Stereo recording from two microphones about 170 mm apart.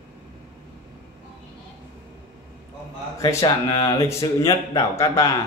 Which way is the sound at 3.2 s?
20° left (ahead or behind).